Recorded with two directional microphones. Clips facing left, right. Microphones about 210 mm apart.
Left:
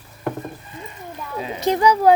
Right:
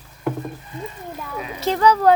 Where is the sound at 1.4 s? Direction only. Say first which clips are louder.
Even; 20° left (ahead or behind).